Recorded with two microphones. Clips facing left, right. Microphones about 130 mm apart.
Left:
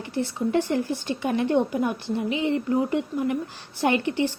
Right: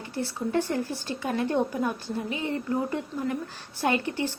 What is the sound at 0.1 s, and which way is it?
A woman's voice, 20° left (ahead or behind).